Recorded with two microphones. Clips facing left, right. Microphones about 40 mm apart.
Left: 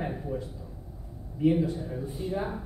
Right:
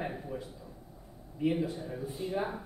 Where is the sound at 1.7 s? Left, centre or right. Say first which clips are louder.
Left 4 dB; centre.